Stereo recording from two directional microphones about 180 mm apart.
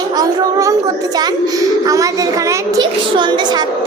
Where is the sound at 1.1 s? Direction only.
20° right (ahead or behind).